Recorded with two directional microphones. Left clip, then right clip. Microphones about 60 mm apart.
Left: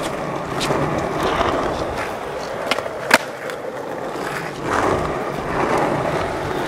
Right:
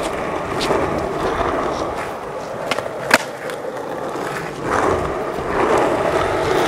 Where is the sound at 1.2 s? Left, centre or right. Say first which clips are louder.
Left 2 dB; left.